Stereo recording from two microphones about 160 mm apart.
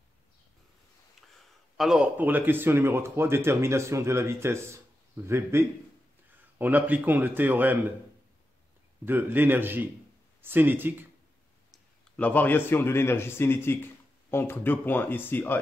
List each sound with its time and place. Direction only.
1.8 s speech: 5° right (ahead or behind)
9.0 s speech: 10° right (ahead or behind)
11.7 s a man's voice: 10° left (ahead or behind)